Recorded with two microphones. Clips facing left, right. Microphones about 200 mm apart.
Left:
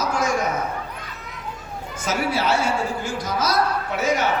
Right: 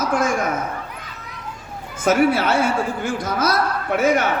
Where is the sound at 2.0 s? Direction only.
55° right (ahead or behind).